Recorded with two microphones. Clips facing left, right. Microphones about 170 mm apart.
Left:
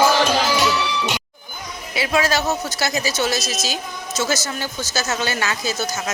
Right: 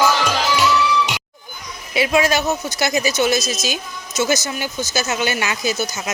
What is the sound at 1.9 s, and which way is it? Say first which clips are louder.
Speech: right 3 dB; 20° right (ahead or behind).